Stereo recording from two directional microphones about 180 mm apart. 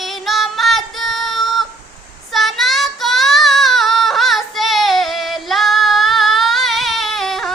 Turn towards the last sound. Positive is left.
turn(degrees=0)  # may be behind; listen again after turning